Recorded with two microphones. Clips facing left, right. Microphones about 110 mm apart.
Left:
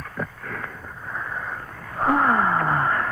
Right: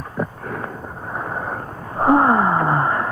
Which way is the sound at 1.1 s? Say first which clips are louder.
Right 5 dB; 40° right (ahead or behind).